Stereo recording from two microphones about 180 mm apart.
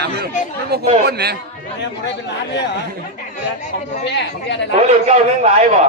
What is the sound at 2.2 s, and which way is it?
Speech, 75° left (ahead or behind).